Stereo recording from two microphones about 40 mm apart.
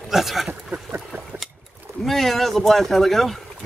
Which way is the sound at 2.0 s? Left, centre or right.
Centre.